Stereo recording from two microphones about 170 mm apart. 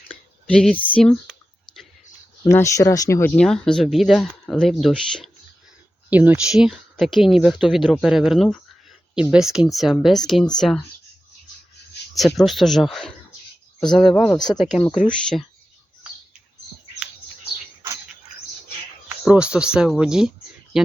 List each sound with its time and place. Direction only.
0.4 s speech: 5° left (ahead or behind)
2.4 s speech: 20° left (ahead or behind)
3.3 s speech: 5° left (ahead or behind)
6.1 s speech: 10° right (ahead or behind)
12.1 s speech: centre (ahead or behind)
14.5 s speech: 25° left (ahead or behind)
15.0 s speech: 5° left (ahead or behind)
19.0 s speech: 5° right (ahead or behind)